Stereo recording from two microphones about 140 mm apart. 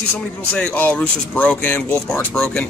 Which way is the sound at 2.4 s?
5° left (ahead or behind).